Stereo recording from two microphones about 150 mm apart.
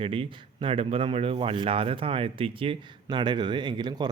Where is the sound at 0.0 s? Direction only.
35° right (ahead or behind).